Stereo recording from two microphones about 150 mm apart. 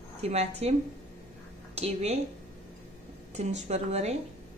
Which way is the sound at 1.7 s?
45° right (ahead or behind).